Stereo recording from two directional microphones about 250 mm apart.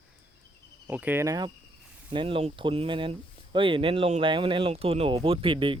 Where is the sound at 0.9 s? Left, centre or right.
Centre.